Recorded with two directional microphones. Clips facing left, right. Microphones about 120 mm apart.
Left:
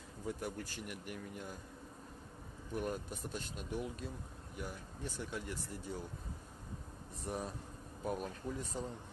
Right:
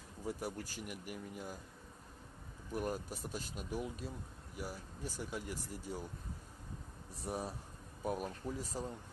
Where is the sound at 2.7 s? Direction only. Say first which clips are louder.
Even; 5° right (ahead or behind).